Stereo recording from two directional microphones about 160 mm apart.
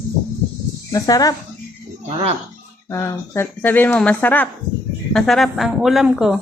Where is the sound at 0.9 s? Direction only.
20° left (ahead or behind).